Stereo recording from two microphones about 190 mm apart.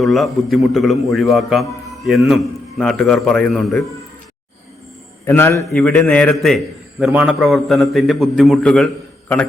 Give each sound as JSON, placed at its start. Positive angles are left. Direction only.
{"t": 0.0, "sound": "a man's voice", "side_deg": 0}
{"t": 5.2, "sound": "a man's voice", "side_deg": 10}